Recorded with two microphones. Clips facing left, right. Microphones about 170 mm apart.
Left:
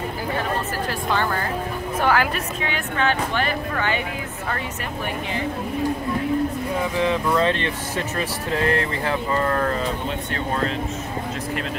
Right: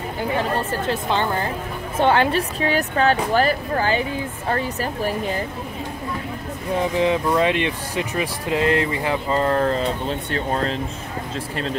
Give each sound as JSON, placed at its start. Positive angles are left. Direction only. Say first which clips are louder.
{"t": 0.4, "sound": "a woman's voice", "louder": "right 2 dB", "side_deg": -20}
{"t": 7.0, "sound": "speech", "louder": "right 1 dB", "side_deg": -15}
{"t": 9.3, "sound": "speech", "louder": "right 4 dB", "side_deg": -25}